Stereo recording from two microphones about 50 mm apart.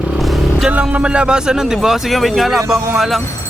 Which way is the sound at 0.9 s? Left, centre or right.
Right.